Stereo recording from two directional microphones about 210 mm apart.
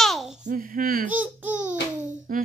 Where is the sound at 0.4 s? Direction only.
40° right (ahead or behind).